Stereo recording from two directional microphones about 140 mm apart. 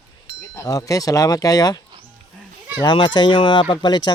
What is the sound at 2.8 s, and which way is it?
Speech, 30° left (ahead or behind).